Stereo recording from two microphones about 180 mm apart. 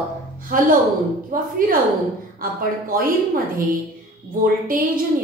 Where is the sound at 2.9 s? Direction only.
50° right (ahead or behind).